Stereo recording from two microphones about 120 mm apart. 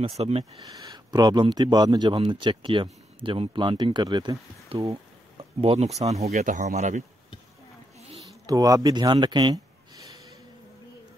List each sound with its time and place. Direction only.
0.0 s speech: 55° right (ahead or behind)
0.7 s speech: 30° right (ahead or behind); by 4.9 s 50° right (ahead or behind)
5.4 s a sound: 55° right (ahead or behind)
5.9 s speech: 65° right (ahead or behind); by 7.1 s 80° right
8.5 s speech: 30° right (ahead or behind)